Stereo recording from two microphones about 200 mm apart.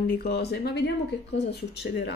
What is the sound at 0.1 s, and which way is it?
Speech, 50° left (ahead or behind).